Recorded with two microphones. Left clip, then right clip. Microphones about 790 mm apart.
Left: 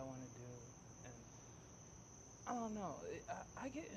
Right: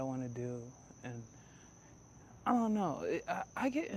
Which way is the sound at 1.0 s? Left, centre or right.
Right.